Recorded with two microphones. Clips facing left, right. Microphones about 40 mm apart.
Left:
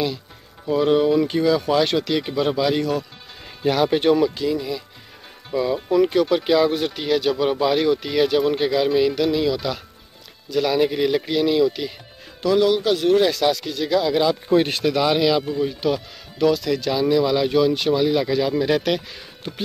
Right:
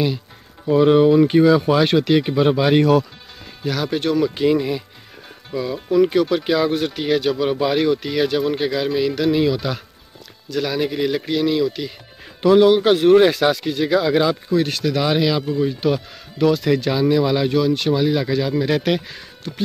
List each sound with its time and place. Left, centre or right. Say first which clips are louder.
0.7 s speech: right 4 dB; centre
2.7 s speech: right 7 dB; right
3.6 s speech: left 4 dB; centre
4.5 s speech: right 6 dB; right
5.5 s speech: left 1 dB; centre
9.3 s speech: right 3 dB; centre
10.5 s speech: left 2 dB; centre
12.4 s speech: right 5 dB; right
14.5 s speech: left 1 dB; left
15.0 s speech: even; centre
17.5 s speech: even; centre